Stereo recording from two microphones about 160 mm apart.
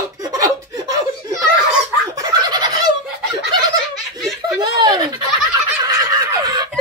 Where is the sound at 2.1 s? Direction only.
25° right (ahead or behind).